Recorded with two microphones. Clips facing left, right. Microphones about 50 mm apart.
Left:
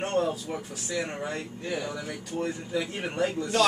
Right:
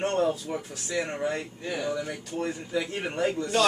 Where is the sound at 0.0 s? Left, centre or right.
Centre.